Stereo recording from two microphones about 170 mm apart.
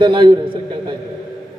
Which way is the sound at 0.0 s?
30° right (ahead or behind).